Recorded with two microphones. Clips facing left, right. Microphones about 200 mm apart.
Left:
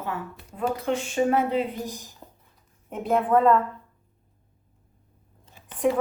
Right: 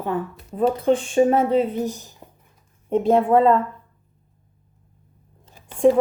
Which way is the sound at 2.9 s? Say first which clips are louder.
Right 6 dB; 30° right (ahead or behind).